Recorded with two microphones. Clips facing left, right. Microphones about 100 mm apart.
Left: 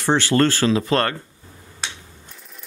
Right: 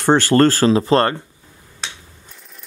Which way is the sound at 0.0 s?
45° right (ahead or behind).